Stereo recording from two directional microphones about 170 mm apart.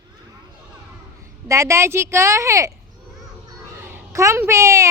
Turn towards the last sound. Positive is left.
turn(degrees=-15)  # may be behind; listen again after turning